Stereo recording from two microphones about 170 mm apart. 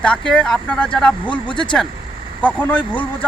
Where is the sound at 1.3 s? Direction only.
30° left (ahead or behind).